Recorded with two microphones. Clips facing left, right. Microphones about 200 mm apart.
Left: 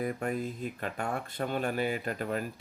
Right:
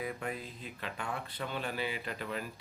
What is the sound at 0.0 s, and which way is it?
Speech, 45° left (ahead or behind).